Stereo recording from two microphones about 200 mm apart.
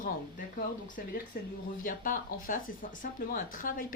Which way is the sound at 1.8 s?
45° left (ahead or behind).